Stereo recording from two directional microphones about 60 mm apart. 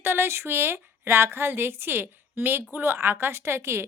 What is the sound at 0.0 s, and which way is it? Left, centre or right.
A woman's voice, right.